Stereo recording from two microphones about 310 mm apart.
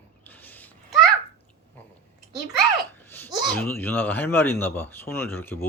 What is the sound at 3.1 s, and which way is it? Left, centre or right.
Speech, centre.